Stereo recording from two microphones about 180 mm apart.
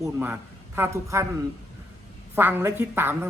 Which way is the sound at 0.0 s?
10° right (ahead or behind).